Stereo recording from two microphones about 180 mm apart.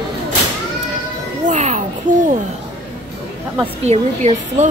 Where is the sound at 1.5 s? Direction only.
40° right (ahead or behind).